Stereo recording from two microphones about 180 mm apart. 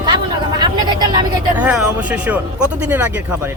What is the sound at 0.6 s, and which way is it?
Speech, 20° right (ahead or behind).